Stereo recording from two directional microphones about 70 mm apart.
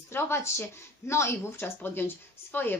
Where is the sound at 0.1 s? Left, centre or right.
Left.